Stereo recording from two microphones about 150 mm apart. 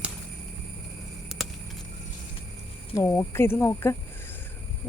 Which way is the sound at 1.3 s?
Centre (ahead or behind).